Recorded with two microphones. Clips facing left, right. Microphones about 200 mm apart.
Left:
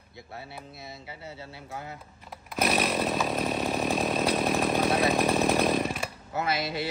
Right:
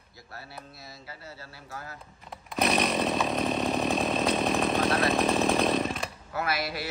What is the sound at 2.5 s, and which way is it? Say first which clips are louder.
Chainsaw: right 1 dB; centre (ahead or behind).